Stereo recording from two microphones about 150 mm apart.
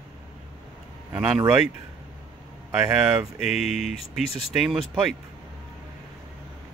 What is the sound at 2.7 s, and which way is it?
Speech, 5° right (ahead or behind).